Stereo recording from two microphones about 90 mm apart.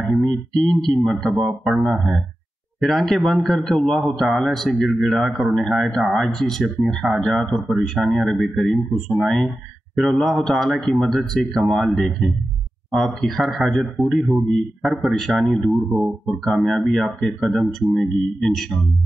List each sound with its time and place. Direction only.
0.0 s speech: centre (ahead or behind)